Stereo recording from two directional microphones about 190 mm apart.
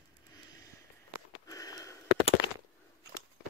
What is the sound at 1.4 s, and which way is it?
Sniff, 20° left (ahead or behind).